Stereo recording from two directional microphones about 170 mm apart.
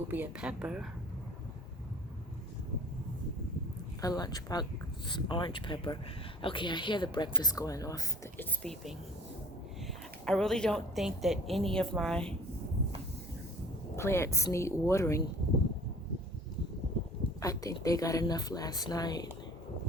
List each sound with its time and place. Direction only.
0.1 s a woman's voice: 10° right (ahead or behind)
4.0 s speech: 20° left (ahead or behind)
8.6 s a woman's voice: centre (ahead or behind)
10.2 s a woman's voice: 5° left (ahead or behind)
13.9 s speech: 15° left (ahead or behind)
17.4 s speech: 20° left (ahead or behind)